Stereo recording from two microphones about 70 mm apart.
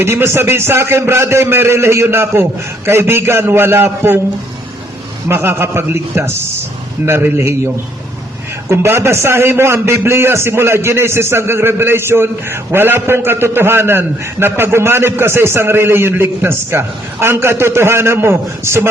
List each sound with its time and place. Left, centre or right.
0.0 s a man's voice: right
5.3 s a man's voice: right
8.7 s a man's voice: right